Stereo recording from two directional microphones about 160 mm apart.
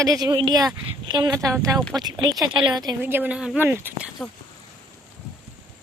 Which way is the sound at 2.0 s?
25° right (ahead or behind).